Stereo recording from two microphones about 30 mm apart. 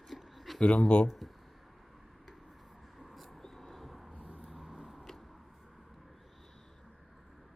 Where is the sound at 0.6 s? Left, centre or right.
Left.